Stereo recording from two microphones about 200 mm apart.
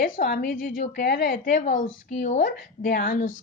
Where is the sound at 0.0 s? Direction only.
45° left (ahead or behind).